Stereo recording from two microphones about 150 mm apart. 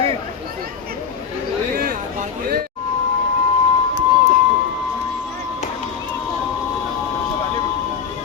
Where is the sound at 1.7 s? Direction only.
70° right (ahead or behind).